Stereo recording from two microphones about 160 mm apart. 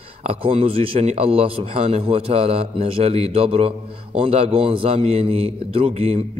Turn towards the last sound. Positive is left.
turn(degrees=-40)  # may be behind; listen again after turning